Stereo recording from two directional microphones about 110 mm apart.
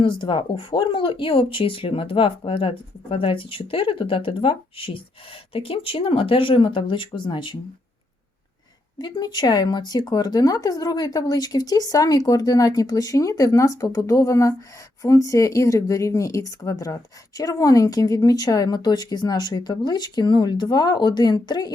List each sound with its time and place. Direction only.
0.0 s speech: 45° left (ahead or behind)
9.0 s speech: 40° left (ahead or behind)